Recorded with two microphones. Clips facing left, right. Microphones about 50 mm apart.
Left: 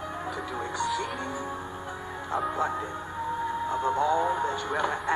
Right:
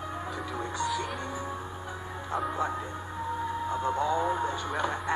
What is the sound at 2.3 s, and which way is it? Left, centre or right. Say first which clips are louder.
Speech: left 2 dB; centre.